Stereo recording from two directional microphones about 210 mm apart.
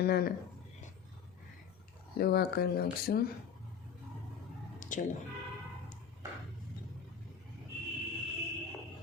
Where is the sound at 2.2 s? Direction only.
50° left (ahead or behind).